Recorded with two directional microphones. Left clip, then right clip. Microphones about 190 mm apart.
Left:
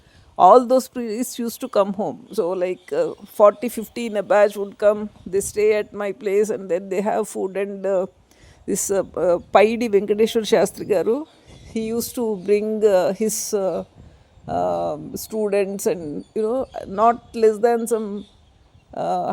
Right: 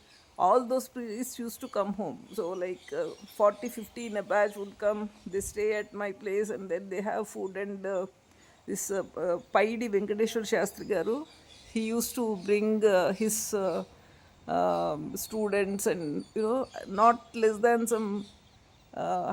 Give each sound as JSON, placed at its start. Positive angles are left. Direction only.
{"t": 0.3, "sound": "speech", "side_deg": 40}
{"t": 1.9, "sound": "speech", "side_deg": 20}
{"t": 2.3, "sound": "speech", "side_deg": 35}
{"t": 18.9, "sound": "speech", "side_deg": 30}